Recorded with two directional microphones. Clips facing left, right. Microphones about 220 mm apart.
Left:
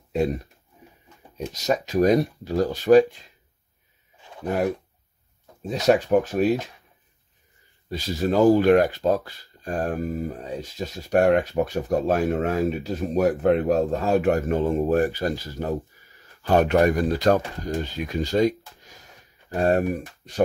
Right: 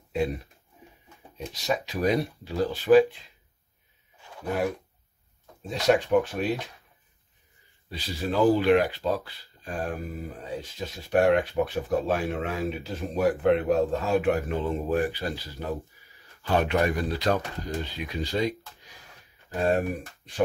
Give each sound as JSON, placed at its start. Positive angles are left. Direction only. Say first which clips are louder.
{"t": 0.1, "sound": "speech", "louder": "left 4 dB", "side_deg": 40}
{"t": 1.4, "sound": "speech", "louder": "left 4 dB", "side_deg": 40}
{"t": 5.9, "sound": "speech", "louder": "left 3 dB", "side_deg": 45}
{"t": 7.9, "sound": "speech", "louder": "left 6 dB", "side_deg": 45}